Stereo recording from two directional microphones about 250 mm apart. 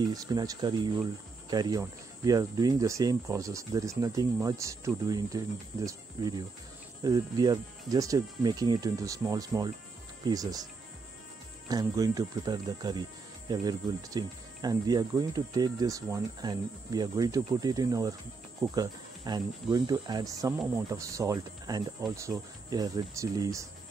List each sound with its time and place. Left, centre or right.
0.0 s speech: centre